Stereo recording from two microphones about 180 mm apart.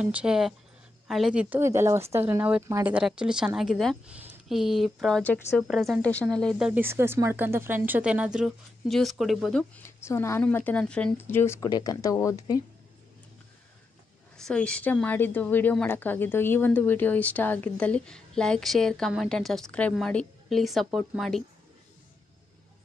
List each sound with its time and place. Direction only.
0.0 s a woman's voice: 5° right (ahead or behind)
6.7 s speech: 15° right (ahead or behind)
9.8 s a woman's voice: 15° left (ahead or behind)
14.3 s a woman's voice: 5° left (ahead or behind)